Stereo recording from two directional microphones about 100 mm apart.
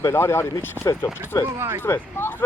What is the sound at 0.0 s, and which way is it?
Speech, 25° left (ahead or behind).